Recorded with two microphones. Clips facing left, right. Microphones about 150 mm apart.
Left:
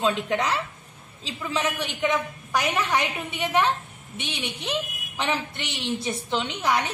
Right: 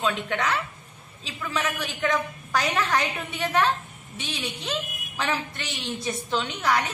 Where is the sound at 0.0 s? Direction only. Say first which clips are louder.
Left 2 dB; 25° left (ahead or behind).